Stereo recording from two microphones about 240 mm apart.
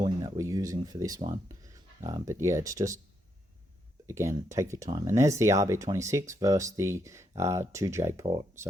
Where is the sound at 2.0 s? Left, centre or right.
Centre.